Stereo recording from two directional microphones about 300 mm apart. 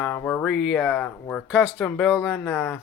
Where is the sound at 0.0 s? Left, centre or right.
Centre.